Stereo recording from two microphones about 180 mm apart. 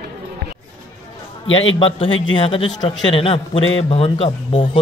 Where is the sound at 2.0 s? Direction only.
90° left.